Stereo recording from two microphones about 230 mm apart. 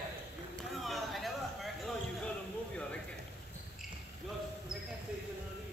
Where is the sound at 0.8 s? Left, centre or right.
Centre.